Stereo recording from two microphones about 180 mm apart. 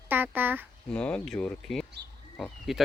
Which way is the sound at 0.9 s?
5° left (ahead or behind).